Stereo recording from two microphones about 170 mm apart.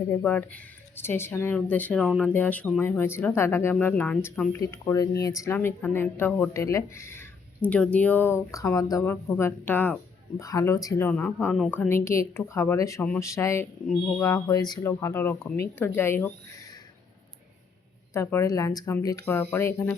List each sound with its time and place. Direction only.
0.1 s speech: 10° left (ahead or behind)
18.1 s speech: 15° left (ahead or behind)